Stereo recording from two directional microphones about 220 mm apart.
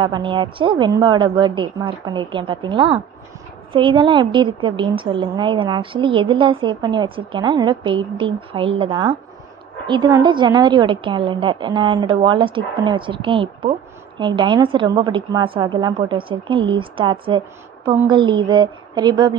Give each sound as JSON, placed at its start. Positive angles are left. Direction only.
{"t": 0.0, "sound": "a woman's voice", "side_deg": -20}
{"t": 17.8, "sound": "a woman's voice", "side_deg": -10}
{"t": 18.1, "sound": "a woman's voice", "side_deg": -20}